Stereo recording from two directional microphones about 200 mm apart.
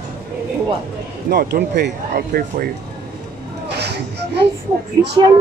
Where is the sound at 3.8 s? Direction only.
55° right (ahead or behind).